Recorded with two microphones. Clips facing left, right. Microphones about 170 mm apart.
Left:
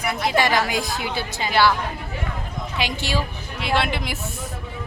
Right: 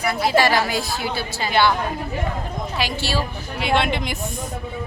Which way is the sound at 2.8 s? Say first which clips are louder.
Even; 20° left (ahead or behind).